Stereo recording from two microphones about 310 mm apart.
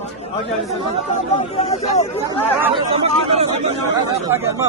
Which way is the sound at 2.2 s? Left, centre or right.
Centre.